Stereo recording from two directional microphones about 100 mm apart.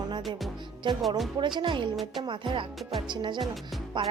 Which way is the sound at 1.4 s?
55° right (ahead or behind).